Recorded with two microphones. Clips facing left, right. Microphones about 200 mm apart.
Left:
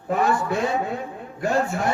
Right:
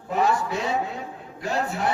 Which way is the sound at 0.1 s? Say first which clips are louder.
Left 2 dB; 55° left (ahead or behind).